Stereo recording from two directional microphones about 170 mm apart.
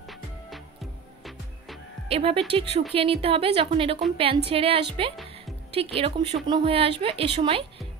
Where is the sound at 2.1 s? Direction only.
35° right (ahead or behind).